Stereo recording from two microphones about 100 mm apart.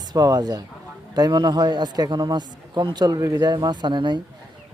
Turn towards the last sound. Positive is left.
turn(degrees=-50)  # may be behind; listen again after turning